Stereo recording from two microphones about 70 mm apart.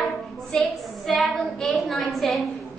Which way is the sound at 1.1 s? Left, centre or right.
Centre.